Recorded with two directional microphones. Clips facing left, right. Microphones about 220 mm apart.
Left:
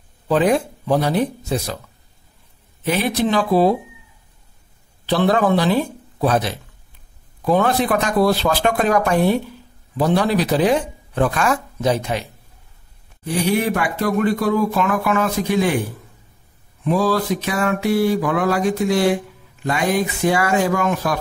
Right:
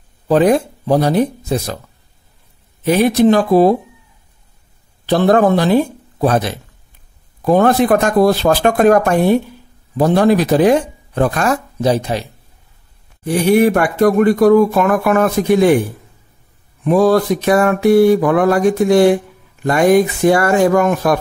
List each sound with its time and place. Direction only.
0.3 s speech: 40° right (ahead or behind)
2.8 s speech: 40° right (ahead or behind)
5.0 s speech: 50° right (ahead or behind)
13.2 s speech: 50° right (ahead or behind)
16.8 s speech: 55° right (ahead or behind)